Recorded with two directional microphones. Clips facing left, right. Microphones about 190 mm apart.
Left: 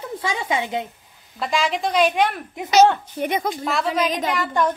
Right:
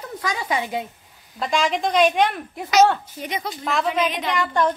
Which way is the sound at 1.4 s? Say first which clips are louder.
Right 1 dB; centre (ahead or behind).